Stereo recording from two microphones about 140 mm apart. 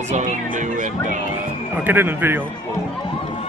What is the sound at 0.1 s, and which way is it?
Speech, 65° right (ahead or behind).